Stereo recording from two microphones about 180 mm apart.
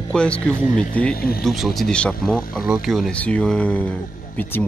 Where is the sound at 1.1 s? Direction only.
55° left (ahead or behind).